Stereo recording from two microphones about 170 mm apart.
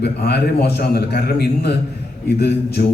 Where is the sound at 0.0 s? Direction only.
75° left (ahead or behind).